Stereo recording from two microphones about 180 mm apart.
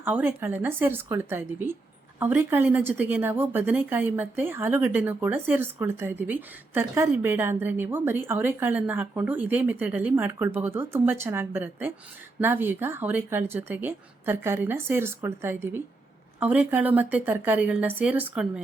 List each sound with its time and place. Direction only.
0.0 s a woman's voice: 10° right (ahead or behind)